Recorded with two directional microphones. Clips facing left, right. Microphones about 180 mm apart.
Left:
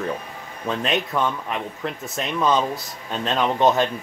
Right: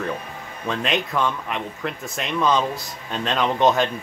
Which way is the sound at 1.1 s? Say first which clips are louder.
Even; 20° left (ahead or behind).